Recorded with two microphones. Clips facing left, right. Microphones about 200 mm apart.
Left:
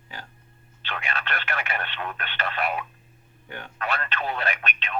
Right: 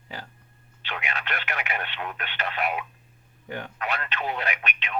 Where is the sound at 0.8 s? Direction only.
15° right (ahead or behind).